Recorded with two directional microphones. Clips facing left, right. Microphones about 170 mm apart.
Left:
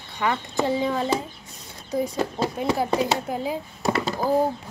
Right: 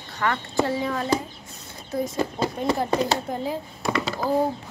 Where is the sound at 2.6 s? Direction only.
5° left (ahead or behind).